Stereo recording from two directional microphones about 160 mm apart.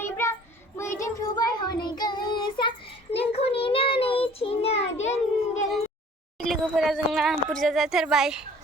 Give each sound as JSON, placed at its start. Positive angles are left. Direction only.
{"t": 0.0, "sound": "child singing", "side_deg": 15}
{"t": 6.4, "sound": "speech", "side_deg": 0}